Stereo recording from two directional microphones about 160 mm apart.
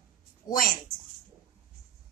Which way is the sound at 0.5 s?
60° left (ahead or behind).